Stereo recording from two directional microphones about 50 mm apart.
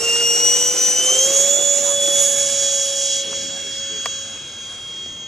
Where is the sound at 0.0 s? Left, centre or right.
Centre.